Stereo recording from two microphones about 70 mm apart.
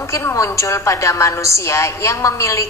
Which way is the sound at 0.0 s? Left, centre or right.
Left.